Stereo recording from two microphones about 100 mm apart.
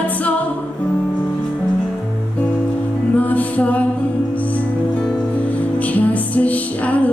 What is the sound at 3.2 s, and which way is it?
Music, 15° left (ahead or behind).